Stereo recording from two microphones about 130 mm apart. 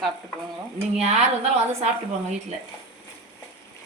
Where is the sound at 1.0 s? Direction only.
60° right (ahead or behind).